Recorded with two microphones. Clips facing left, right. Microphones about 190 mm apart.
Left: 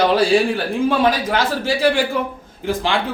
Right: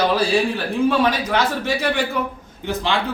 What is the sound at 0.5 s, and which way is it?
A man's voice, 30° left (ahead or behind).